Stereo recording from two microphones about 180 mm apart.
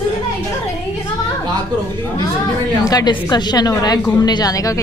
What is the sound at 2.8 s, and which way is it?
A woman's voice, 20° left (ahead or behind).